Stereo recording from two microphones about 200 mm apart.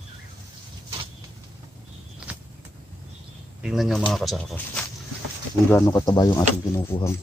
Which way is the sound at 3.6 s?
Centre (ahead or behind).